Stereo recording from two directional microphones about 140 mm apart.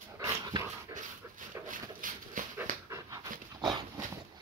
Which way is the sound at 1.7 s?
70° right (ahead or behind).